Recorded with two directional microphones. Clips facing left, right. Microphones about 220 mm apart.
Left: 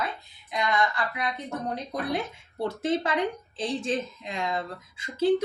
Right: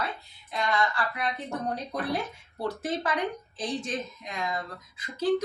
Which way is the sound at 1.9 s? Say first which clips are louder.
Left 1 dB; 25° left (ahead or behind).